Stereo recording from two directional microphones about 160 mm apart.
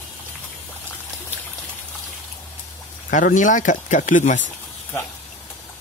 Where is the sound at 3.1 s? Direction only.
55° left (ahead or behind).